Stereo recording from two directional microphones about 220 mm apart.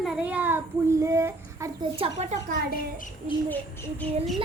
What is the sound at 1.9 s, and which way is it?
Speech, 30° right (ahead or behind).